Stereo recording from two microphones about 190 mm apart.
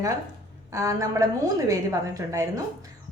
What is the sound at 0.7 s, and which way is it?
A woman's voice, 15° right (ahead or behind).